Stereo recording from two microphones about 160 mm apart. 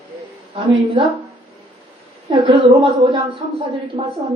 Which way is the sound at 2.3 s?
30° right (ahead or behind).